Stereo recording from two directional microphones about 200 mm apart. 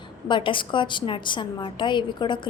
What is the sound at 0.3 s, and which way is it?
A woman's voice, 25° left (ahead or behind).